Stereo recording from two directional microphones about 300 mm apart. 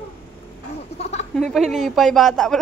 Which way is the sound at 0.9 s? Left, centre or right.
Left.